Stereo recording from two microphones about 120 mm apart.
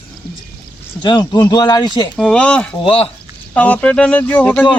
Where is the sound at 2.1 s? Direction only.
10° left (ahead or behind).